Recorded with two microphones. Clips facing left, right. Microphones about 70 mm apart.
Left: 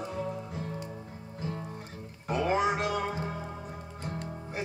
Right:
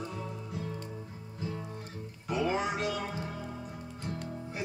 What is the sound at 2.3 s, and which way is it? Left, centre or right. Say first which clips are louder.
Music: left 3 dB; left.